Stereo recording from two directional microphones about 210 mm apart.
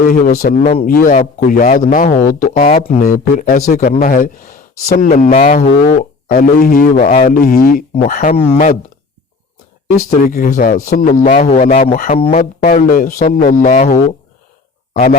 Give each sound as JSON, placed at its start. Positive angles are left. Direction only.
{"t": 0.1, "sound": "speech", "side_deg": 40}
{"t": 0.9, "sound": "speech", "side_deg": 40}
{"t": 10.0, "sound": "speech", "side_deg": 45}